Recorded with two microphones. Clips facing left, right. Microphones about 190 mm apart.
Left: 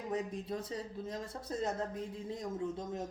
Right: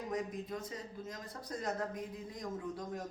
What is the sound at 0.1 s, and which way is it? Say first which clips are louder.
A woman's voice: left 3 dB; 30° left (ahead or behind).